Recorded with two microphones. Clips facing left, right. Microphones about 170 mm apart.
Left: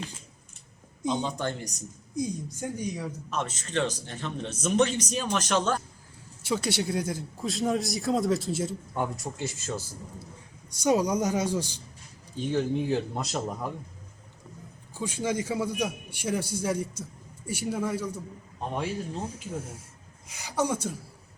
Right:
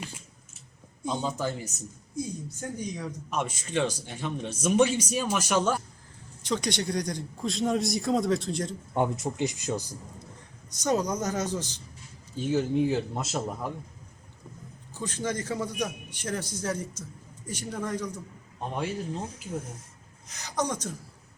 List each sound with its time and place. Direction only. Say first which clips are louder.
1.2 s speech: even; 5° right (ahead or behind)
2.1 s a man's voice: left 3 dB; 10° left (ahead or behind)
3.2 s speech: right 4 dB; 10° right (ahead or behind)
6.4 s speech: left 1 dB; 5° left (ahead or behind)
9.0 s speech: right 5 dB; 20° right (ahead or behind)
10.7 s a man's voice: left 3 dB; 10° left (ahead or behind)
12.4 s speech: right 2 dB; 5° right (ahead or behind)
14.9 s a man's voice: left 2 dB; 10° left (ahead or behind)